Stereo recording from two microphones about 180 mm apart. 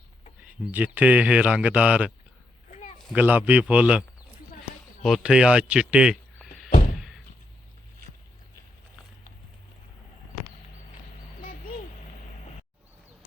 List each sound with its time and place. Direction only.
0.4 s speech: 10° right (ahead or behind)
2.6 s a sound: 40° left (ahead or behind)
3.1 s speech: 10° right (ahead or behind)
5.0 s speech: centre (ahead or behind)